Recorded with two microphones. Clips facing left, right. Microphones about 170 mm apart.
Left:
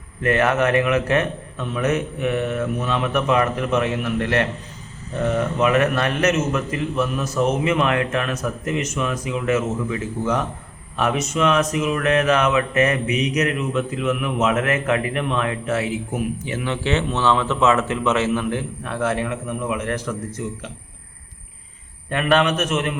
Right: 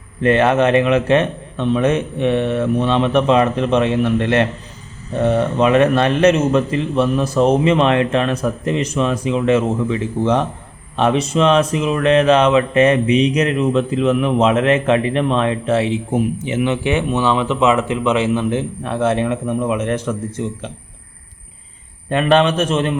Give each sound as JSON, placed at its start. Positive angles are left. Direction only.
{"t": 0.2, "sound": "speech", "side_deg": -25}
{"t": 22.1, "sound": "speech", "side_deg": -25}